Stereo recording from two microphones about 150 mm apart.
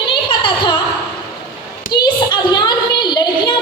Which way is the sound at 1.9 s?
30° left (ahead or behind).